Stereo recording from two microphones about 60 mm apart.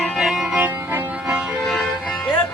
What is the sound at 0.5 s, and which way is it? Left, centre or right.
Music, right.